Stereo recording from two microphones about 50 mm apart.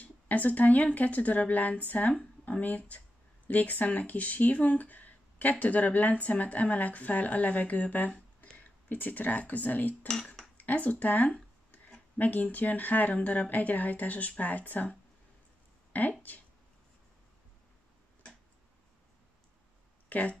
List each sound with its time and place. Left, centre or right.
0.0 s speech: left
10.0 s cutlery: centre
10.6 s speech: left
15.9 s speech: left
20.1 s speech: left